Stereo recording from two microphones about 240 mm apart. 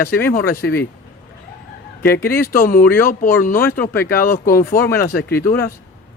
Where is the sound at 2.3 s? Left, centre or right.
Left.